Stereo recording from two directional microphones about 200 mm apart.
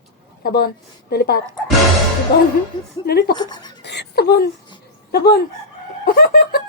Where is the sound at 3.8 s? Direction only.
55° left (ahead or behind).